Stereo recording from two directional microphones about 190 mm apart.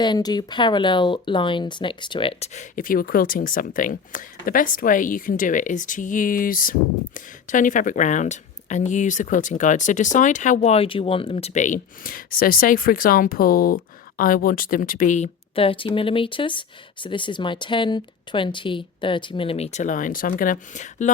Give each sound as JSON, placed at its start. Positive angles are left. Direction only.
{"t": 0.0, "sound": "speech", "side_deg": 20}